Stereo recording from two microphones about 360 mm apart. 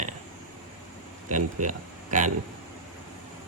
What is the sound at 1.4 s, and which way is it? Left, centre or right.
Speech, right.